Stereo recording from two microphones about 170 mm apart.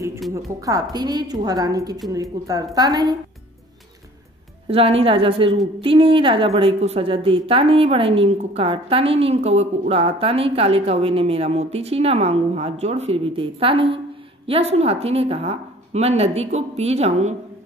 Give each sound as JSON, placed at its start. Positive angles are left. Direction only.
{"t": 0.3, "sound": "a woman's voice", "side_deg": -20}
{"t": 4.6, "sound": "a woman's voice", "side_deg": -35}